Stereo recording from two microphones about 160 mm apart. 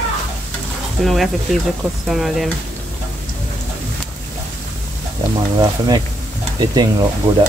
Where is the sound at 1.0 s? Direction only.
Centre (ahead or behind).